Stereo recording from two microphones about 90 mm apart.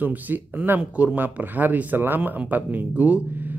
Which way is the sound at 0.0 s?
20° right (ahead or behind).